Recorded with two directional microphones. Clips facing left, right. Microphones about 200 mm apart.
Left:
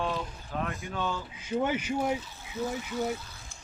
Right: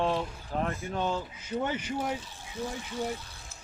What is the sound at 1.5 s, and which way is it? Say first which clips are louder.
Speech: left 3 dB; 10° left (ahead or behind).